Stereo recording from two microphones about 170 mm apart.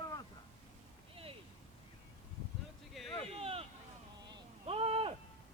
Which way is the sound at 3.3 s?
35° right (ahead or behind).